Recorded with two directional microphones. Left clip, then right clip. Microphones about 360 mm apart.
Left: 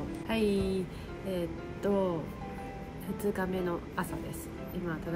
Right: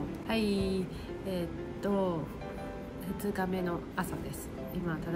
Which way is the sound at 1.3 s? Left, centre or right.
Centre.